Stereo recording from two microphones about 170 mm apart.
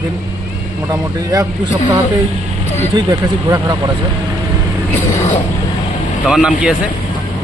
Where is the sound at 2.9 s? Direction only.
25° right (ahead or behind).